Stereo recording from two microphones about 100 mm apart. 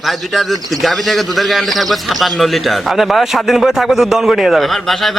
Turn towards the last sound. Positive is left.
turn(degrees=-5)  # may be behind; listen again after turning